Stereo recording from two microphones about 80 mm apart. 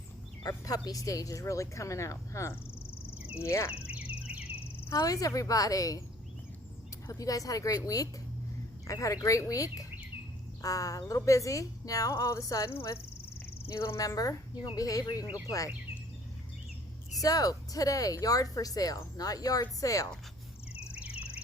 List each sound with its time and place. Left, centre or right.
0.4 s speech: left
3.9 s a sound: centre
4.9 s speech: left
7.1 s speech: left
12.7 s speech: left
17.2 s speech: left